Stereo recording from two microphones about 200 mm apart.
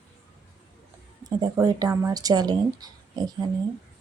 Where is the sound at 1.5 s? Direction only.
15° right (ahead or behind).